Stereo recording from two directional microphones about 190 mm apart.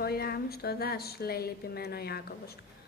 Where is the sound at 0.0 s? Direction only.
55° left (ahead or behind).